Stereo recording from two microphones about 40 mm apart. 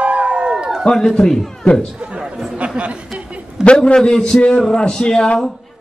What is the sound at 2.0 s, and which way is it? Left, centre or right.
Speech, right.